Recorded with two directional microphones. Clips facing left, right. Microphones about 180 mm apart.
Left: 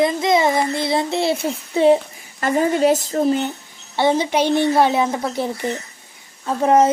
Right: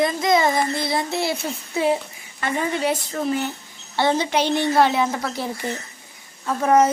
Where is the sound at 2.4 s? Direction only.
45° left (ahead or behind); by 3.5 s 25° left (ahead or behind).